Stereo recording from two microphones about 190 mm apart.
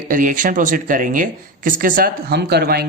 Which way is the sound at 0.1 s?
45° right (ahead or behind).